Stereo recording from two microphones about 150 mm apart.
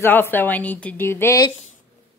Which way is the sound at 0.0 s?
15° left (ahead or behind).